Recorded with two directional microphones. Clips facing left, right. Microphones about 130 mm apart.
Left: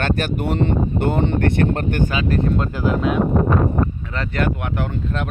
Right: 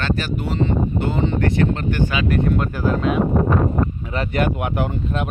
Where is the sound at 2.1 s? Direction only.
35° left (ahead or behind).